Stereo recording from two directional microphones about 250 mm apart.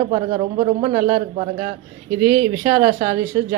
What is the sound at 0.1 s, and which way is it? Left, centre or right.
Speech, right.